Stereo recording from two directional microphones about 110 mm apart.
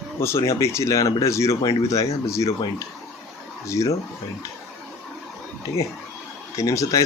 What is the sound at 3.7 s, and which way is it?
Speech, 30° left (ahead or behind).